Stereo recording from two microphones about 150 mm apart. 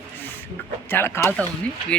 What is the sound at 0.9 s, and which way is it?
Speech, 15° left (ahead or behind).